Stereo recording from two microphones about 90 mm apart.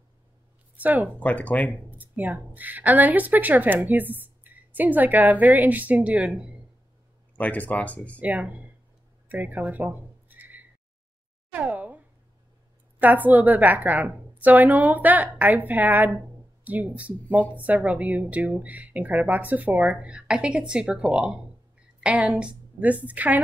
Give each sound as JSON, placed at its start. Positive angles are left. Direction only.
{"t": 0.7, "sound": "speech", "side_deg": -20}
{"t": 1.2, "sound": "speech", "side_deg": 15}
{"t": 1.7, "sound": "speech", "side_deg": -20}
{"t": 7.3, "sound": "speech", "side_deg": 15}
{"t": 8.2, "sound": "speech", "side_deg": -15}
{"t": 13.0, "sound": "a woman's voice", "side_deg": -20}